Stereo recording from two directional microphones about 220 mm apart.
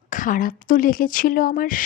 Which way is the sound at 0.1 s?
35° left (ahead or behind).